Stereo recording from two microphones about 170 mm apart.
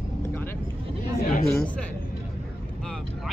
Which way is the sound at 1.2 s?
60° left (ahead or behind).